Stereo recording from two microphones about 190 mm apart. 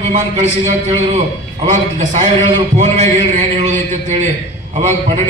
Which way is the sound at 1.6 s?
40° right (ahead or behind).